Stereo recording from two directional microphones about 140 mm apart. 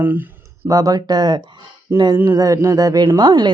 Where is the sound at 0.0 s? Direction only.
15° right (ahead or behind).